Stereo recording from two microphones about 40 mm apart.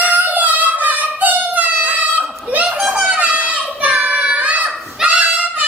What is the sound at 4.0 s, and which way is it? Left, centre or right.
Child singing, right.